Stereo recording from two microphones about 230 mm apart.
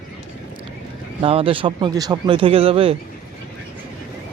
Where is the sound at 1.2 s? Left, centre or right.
Right.